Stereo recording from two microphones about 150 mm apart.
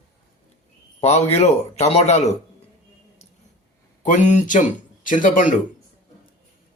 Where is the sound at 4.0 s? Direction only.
55° left (ahead or behind).